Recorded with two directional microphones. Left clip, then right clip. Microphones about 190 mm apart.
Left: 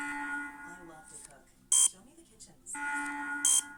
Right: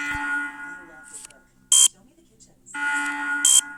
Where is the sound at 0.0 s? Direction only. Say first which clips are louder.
Right 11 dB; 50° right (ahead or behind).